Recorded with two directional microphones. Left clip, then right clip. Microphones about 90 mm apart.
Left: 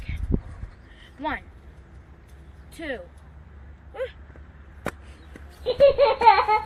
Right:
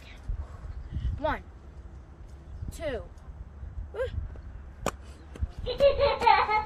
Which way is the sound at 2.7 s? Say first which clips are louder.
Left 1 dB; 60° right (ahead or behind).